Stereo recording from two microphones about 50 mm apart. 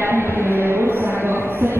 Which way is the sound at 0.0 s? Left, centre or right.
Right.